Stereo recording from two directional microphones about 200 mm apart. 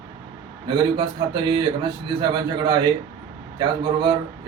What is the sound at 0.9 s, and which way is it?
A man's voice, 20° right (ahead or behind).